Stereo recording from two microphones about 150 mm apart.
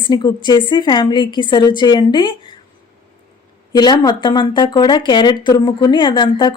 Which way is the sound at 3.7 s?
30° left (ahead or behind).